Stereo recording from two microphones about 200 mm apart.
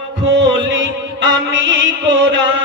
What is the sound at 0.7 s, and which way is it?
Music, 70° right (ahead or behind).